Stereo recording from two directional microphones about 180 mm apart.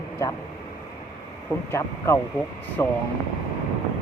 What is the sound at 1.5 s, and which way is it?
Speech, 15° left (ahead or behind).